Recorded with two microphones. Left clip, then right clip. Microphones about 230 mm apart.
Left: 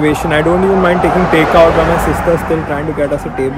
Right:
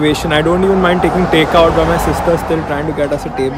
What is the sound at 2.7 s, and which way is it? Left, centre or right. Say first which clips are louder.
Speech: left 1 dB; centre.